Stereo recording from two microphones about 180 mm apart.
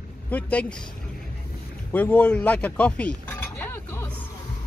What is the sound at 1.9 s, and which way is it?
Speech, 10° left (ahead or behind).